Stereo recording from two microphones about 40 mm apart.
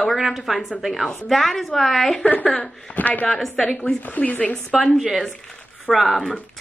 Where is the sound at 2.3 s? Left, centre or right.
Left.